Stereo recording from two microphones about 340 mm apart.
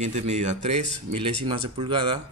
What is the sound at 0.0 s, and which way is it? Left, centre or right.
Speech, centre.